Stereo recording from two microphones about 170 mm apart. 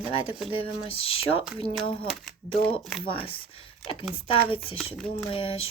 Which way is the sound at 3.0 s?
30° left (ahead or behind).